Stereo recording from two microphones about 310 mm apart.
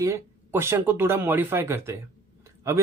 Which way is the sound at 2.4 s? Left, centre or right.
Centre.